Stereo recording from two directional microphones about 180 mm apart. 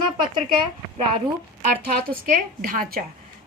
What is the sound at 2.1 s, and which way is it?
Speech, 50° right (ahead or behind).